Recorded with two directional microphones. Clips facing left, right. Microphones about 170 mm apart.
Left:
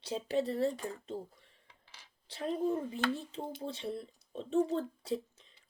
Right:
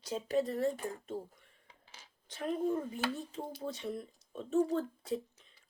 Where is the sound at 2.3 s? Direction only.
30° left (ahead or behind).